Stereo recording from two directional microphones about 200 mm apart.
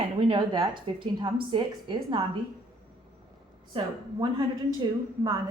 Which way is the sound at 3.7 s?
25° right (ahead or behind).